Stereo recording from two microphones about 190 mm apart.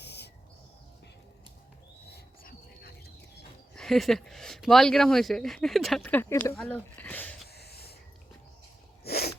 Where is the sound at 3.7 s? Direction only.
Centre (ahead or behind).